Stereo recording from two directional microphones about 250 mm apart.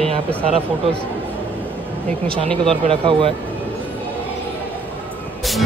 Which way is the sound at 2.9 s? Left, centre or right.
Right.